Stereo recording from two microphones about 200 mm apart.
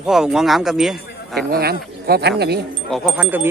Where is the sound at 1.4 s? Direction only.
50° right (ahead or behind).